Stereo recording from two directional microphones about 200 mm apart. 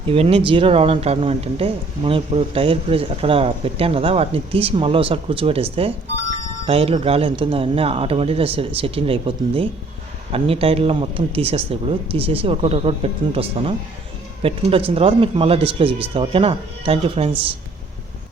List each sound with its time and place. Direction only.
0.1 s speech: 30° right (ahead or behind)